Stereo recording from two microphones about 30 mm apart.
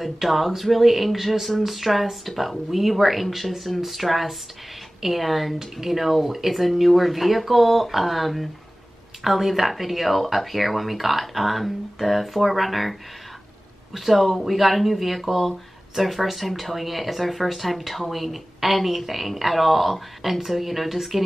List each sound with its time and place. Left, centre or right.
0.0 s speech: centre
13.9 s speech: centre